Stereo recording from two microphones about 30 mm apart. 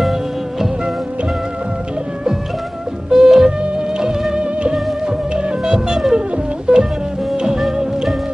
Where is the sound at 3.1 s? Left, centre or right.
Centre.